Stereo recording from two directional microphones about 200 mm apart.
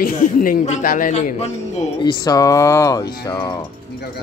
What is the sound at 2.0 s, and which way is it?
Speech, 20° left (ahead or behind).